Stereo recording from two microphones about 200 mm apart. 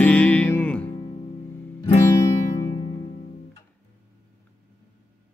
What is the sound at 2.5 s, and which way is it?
Music, 35° left (ahead or behind).